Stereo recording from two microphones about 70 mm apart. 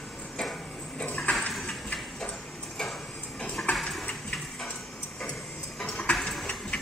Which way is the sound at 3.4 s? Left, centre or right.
Centre.